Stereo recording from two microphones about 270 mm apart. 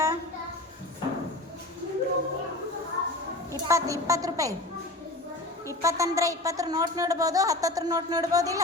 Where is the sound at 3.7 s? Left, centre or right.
Centre.